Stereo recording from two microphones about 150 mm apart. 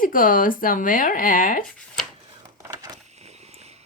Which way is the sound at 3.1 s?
45° right (ahead or behind).